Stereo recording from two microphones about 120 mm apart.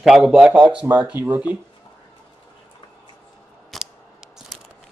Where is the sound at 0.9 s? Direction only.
15° right (ahead or behind).